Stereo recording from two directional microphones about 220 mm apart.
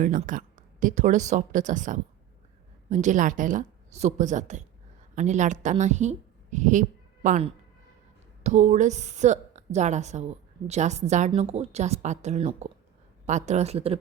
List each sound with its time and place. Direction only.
0.0 s a woman's voice: 35° right (ahead or behind)